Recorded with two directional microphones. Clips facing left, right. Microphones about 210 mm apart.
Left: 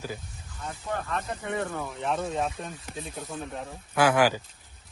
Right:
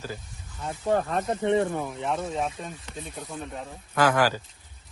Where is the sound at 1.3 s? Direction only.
25° right (ahead or behind).